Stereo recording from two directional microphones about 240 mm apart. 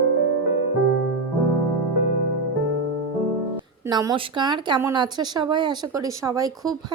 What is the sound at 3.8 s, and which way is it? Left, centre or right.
Speech, centre.